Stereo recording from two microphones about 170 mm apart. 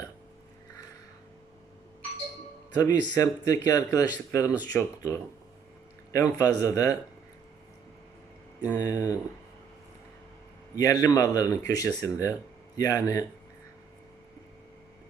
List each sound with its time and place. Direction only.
2.7 s a man's voice: 20° left (ahead or behind)
8.6 s speech: 20° left (ahead or behind)
10.8 s speech: 20° left (ahead or behind)